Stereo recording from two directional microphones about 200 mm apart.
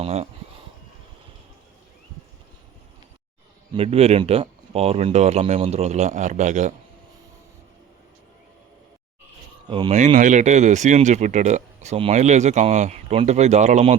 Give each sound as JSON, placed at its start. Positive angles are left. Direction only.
{"t": 0.0, "sound": "speech", "side_deg": -30}
{"t": 3.8, "sound": "speech", "side_deg": -30}
{"t": 9.6, "sound": "speech", "side_deg": -25}
{"t": 10.2, "sound": "speech", "side_deg": -40}